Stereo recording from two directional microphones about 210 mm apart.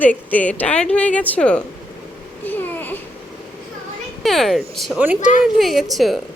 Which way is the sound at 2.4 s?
10° left (ahead or behind).